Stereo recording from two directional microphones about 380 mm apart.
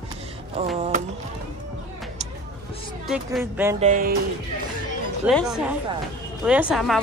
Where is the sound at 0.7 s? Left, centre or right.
Centre.